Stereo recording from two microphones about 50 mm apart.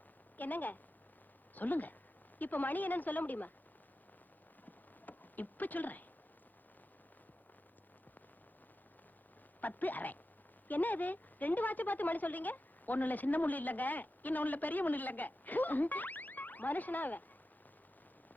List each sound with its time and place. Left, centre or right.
0.3 s a woman's voice: left
4.6 s a sound: left
9.6 s a woman's voice: left